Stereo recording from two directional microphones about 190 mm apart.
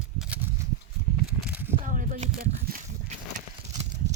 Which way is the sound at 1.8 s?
40° right (ahead or behind).